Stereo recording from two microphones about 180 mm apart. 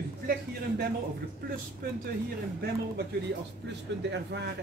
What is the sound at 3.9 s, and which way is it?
Speech, 80° right.